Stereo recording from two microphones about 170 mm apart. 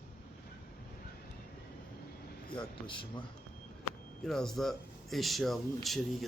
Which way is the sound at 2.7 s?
30° left (ahead or behind).